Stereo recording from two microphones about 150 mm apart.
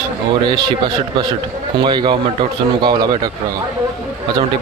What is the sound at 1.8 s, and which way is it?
Speech, 30° right (ahead or behind).